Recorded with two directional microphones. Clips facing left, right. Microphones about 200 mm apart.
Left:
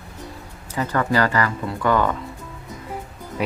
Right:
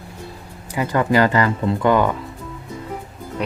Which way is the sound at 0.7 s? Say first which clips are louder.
Right 3 dB; 15° right (ahead or behind).